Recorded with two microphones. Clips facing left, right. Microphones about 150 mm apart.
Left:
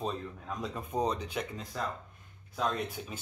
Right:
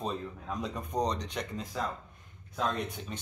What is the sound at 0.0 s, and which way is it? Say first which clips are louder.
Speech: even; centre (ahead or behind).